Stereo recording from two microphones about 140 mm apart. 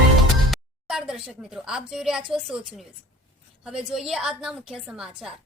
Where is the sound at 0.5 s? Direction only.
5° right (ahead or behind).